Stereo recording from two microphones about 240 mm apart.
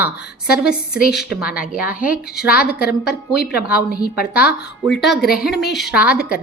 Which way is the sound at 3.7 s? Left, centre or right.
Left.